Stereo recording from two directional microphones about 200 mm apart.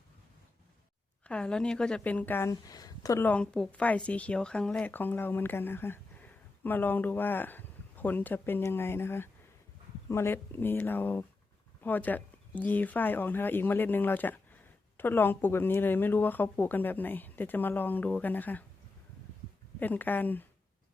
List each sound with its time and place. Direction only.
1.3 s a woman's voice: 5° left (ahead or behind)
19.8 s a woman's voice: 10° left (ahead or behind)